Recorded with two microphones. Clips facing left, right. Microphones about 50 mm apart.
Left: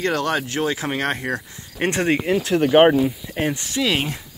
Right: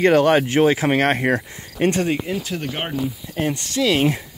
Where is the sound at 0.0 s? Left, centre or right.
Centre.